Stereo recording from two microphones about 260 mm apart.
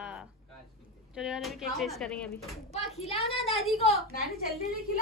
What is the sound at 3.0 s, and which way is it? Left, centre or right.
Speech, left.